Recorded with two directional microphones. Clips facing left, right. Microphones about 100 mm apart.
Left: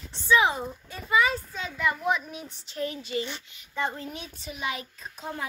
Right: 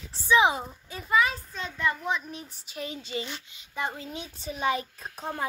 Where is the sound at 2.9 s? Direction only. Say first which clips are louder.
Left 3 dB; 25° right (ahead or behind).